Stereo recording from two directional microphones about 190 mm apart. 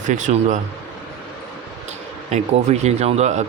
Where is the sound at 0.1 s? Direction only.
40° right (ahead or behind).